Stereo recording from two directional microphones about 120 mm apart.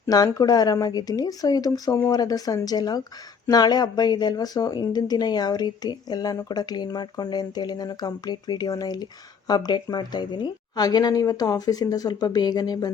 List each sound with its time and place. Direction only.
0.0 s speech: 30° left (ahead or behind)